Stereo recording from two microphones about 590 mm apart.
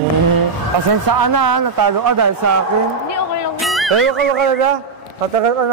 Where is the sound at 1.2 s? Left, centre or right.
Right.